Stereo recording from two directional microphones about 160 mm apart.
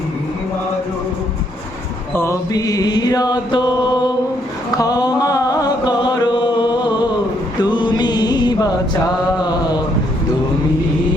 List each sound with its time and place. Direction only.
2.1 s chant: 15° left (ahead or behind)
4.7 s a sound: 25° left (ahead or behind)
7.6 s chant: 30° left (ahead or behind)
9.4 s mantra: 25° left (ahead or behind)